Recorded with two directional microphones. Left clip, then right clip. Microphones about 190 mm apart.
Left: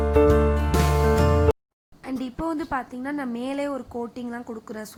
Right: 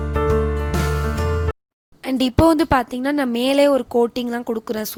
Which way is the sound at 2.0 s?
50° right (ahead or behind).